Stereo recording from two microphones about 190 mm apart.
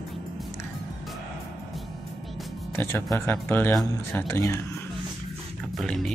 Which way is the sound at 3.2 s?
10° left (ahead or behind).